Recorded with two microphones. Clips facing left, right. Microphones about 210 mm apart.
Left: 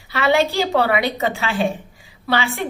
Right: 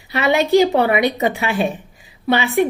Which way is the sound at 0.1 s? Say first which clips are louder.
Right 3 dB; 20° right (ahead or behind).